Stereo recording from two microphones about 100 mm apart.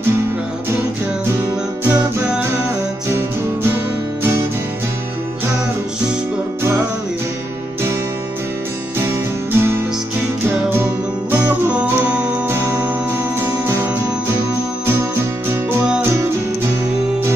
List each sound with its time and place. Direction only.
1.9 s music: 15° right (ahead or behind)
3.7 s music: 20° right (ahead or behind)
9.6 s music: 25° right (ahead or behind)
11.3 s music: 15° right (ahead or behind)
12.4 s music: 25° right (ahead or behind)